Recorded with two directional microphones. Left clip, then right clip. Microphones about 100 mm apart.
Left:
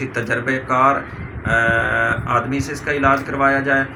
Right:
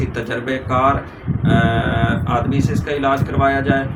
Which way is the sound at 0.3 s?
10° right (ahead or behind).